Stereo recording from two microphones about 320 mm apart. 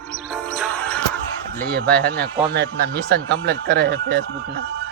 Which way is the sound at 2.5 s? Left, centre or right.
Right.